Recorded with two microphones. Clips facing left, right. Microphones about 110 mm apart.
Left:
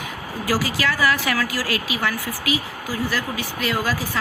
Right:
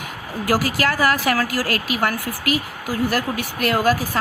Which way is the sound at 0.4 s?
50° right (ahead or behind).